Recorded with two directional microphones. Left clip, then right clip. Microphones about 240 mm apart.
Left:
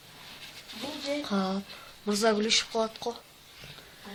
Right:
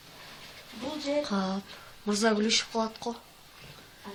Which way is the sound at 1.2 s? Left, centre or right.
Centre.